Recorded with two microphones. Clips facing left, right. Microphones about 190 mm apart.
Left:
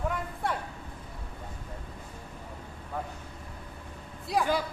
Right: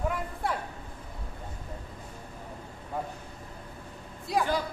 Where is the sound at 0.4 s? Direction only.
Centre (ahead or behind).